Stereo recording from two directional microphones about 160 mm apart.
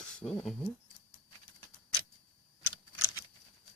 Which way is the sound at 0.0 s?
5° left (ahead or behind).